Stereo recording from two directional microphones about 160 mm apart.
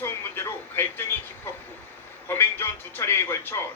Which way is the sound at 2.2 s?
15° left (ahead or behind).